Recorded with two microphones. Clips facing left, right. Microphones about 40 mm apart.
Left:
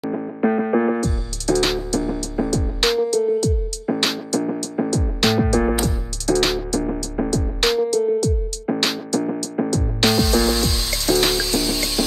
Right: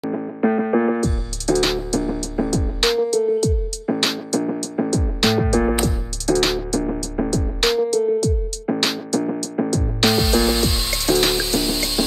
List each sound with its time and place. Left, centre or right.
0.0 s music: centre
10.3 s music: right